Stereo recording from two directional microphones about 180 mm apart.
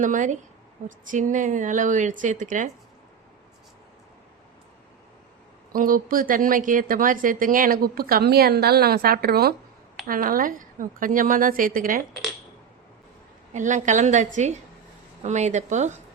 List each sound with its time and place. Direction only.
0.0 s a woman's voice: 45° right (ahead or behind)
5.7 s a woman's voice: 50° right (ahead or behind)
13.5 s a woman's voice: 40° right (ahead or behind)